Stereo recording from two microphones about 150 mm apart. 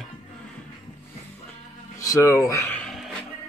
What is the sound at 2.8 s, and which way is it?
Music, centre (ahead or behind).